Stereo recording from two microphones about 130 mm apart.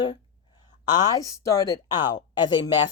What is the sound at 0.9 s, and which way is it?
A woman's voice, 30° left (ahead or behind).